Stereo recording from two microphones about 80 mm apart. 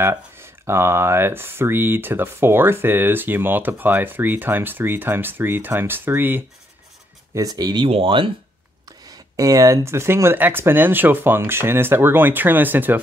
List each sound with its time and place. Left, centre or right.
0.0 s speech: right
7.3 s speech: right
7.8 s speech: right
8.8 s speech: right